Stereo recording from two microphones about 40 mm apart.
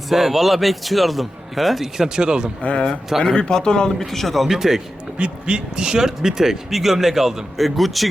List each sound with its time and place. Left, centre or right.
0.1 s a man's voice: centre
2.6 s speech: left
3.3 s speech: centre
3.9 s a man's voice: centre
4.4 s speech: centre
5.1 s speech: right; by 8.0 s centre